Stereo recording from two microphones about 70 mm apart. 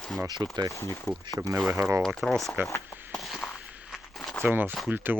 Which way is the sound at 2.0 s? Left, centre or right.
Centre.